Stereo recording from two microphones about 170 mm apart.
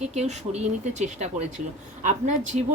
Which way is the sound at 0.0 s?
40° right (ahead or behind).